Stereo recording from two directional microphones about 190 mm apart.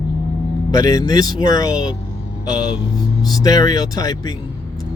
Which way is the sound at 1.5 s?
20° left (ahead or behind).